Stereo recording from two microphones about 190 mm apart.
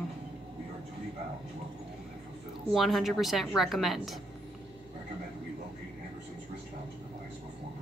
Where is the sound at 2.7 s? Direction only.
Centre (ahead or behind).